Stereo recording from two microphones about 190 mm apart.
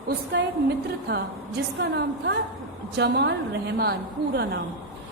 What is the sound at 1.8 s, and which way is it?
A woman's voice, 65° right (ahead or behind).